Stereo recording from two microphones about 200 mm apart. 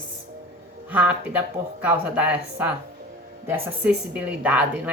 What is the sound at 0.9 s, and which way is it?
A woman's voice, 10° right (ahead or behind).